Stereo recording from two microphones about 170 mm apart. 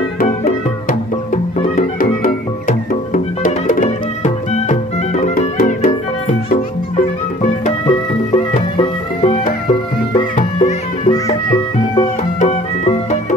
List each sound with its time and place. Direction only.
0.2 s music: 55° left (ahead or behind)
7.4 s music: 30° left (ahead or behind)
12.4 s music: 40° left (ahead or behind)